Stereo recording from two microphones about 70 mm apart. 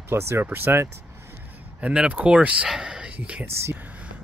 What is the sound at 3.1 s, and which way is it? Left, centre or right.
Speech, centre.